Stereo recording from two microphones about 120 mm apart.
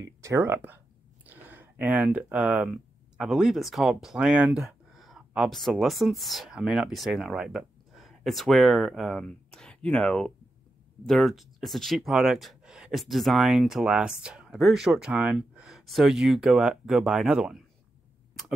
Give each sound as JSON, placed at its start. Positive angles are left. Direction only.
{"t": 0.2, "sound": "speech", "side_deg": -25}
{"t": 4.9, "sound": "speech", "side_deg": 0}